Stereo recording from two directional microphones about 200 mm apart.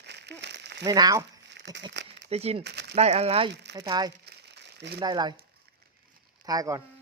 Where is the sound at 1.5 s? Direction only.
60° right (ahead or behind).